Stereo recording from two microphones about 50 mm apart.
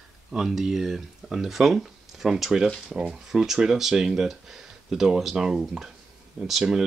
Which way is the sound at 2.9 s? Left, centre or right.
Centre.